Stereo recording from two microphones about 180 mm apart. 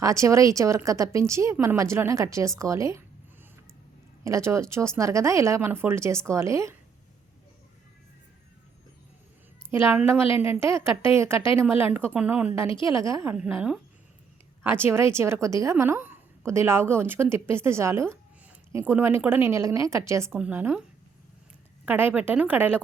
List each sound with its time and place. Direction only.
0.0 s a woman's voice: 15° right (ahead or behind)
4.2 s a woman's voice: 15° right (ahead or behind)
9.6 s a woman's voice: 15° right (ahead or behind)
21.8 s a woman's voice: 10° right (ahead or behind)